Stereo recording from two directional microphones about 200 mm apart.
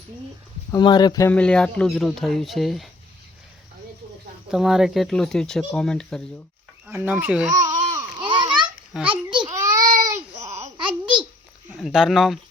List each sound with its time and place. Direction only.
0.7 s speech: 20° left (ahead or behind)
1.3 s speech: 5° left (ahead or behind)
4.5 s speech: centre (ahead or behind)
6.8 s speech: 10° right (ahead or behind)
7.9 s babbling: 25° right (ahead or behind)
9.0 s a sound: 25° right (ahead or behind)
9.5 s baby cry: 15° right (ahead or behind)
10.3 s babbling: 35° right (ahead or behind)
10.6 s a sound: 25° right (ahead or behind)
11.8 s speech: centre (ahead or behind)